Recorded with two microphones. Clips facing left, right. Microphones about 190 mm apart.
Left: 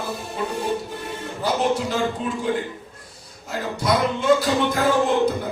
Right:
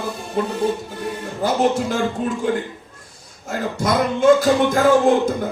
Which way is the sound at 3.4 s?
45° right (ahead or behind).